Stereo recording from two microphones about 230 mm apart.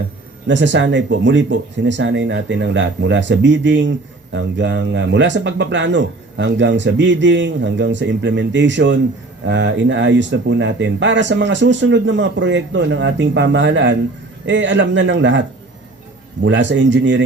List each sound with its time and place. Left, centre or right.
0.4 s speech: right